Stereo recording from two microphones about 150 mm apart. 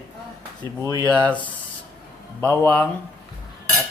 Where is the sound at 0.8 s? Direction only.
25° right (ahead or behind).